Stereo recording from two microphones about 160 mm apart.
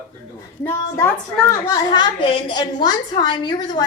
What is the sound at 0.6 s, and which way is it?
Speech, 15° left (ahead or behind).